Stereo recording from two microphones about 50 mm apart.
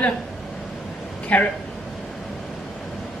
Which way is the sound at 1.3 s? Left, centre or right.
Left.